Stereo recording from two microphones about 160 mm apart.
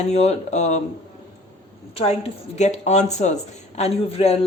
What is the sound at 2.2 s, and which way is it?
A woman's voice, 45° left (ahead or behind).